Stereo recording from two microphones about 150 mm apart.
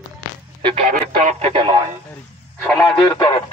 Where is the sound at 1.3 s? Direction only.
40° right (ahead or behind).